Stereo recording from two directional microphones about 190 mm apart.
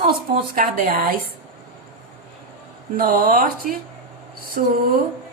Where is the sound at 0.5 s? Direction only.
50° right (ahead or behind).